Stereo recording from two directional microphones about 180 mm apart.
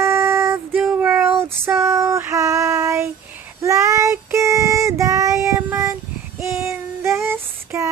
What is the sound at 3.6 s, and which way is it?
Child singing, 15° right (ahead or behind).